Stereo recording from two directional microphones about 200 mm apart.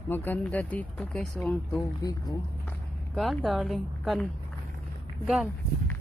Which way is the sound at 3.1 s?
Centre (ahead or behind).